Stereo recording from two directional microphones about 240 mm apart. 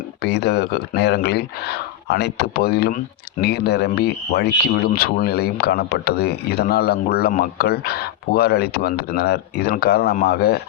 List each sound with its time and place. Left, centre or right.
0.2 s speech: left